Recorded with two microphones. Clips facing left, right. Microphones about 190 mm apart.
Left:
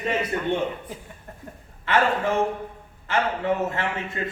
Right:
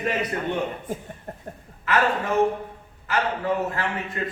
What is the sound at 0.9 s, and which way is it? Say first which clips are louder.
Speech: right 7 dB; 50° right (ahead or behind).